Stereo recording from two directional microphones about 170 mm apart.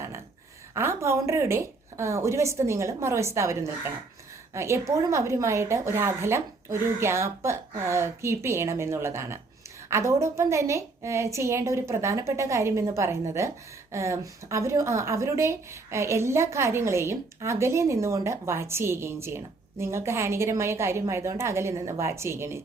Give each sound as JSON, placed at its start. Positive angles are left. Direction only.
{"t": 0.7, "sound": "speech", "side_deg": -15}